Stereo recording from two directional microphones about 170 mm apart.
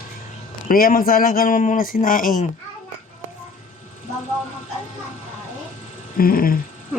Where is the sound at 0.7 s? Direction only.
60° left (ahead or behind).